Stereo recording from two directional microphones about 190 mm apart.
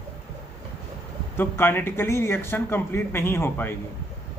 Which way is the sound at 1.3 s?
10° left (ahead or behind).